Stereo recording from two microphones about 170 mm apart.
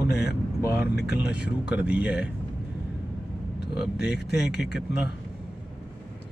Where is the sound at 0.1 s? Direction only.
75° left (ahead or behind).